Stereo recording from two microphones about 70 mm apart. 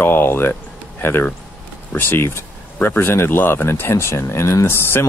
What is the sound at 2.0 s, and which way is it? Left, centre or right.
Speech, left.